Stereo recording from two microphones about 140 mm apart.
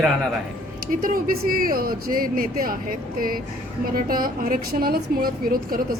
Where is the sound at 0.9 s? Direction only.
85° right.